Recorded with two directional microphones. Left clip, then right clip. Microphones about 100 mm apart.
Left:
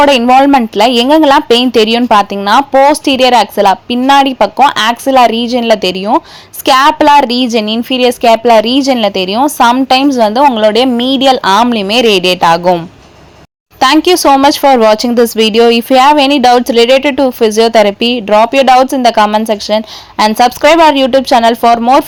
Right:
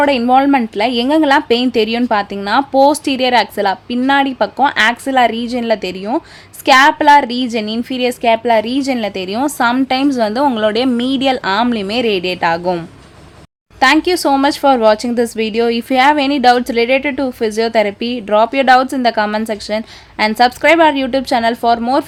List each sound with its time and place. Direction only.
0.3 s speech: 35° left (ahead or behind)
2.7 s speech: 20° left (ahead or behind); by 12.7 s 40° left (ahead or behind)
13.7 s speech: 45° left (ahead or behind)